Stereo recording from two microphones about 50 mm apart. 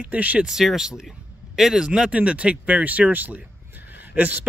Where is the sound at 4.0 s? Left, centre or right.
Right.